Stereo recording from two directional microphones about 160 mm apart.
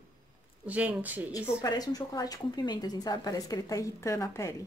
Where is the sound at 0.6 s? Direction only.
10° right (ahead or behind).